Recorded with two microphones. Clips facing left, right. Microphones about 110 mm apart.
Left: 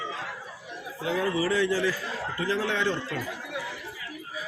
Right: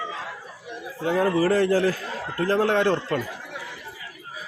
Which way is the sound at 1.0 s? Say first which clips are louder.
Right 6 dB; 45° right (ahead or behind).